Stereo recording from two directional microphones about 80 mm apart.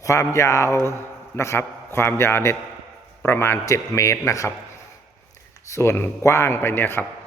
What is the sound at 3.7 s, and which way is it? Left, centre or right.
Speech, left.